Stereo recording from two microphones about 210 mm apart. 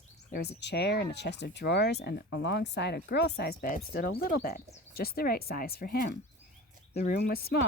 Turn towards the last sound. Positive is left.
turn(degrees=45)  # may be behind; listen again after turning